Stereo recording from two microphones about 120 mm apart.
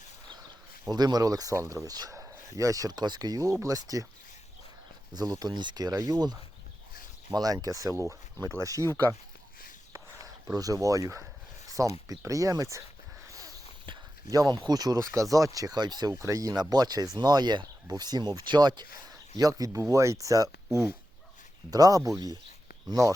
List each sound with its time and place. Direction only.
0.9 s speech: 35° right (ahead or behind)
5.1 s speech: 35° right (ahead or behind)
7.3 s speech: 30° right (ahead or behind)
9.9 s a sound: 25° right (ahead or behind)
11.7 s speech: 30° right (ahead or behind)
13.8 s speech: 35° right (ahead or behind)
21.7 s speech: 30° right (ahead or behind)